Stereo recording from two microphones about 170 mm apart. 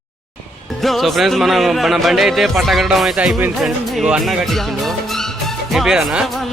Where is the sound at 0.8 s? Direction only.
Centre (ahead or behind).